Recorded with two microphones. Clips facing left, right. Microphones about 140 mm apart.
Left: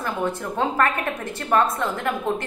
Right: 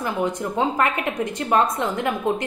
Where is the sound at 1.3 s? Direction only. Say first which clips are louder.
Even; 20° right (ahead or behind).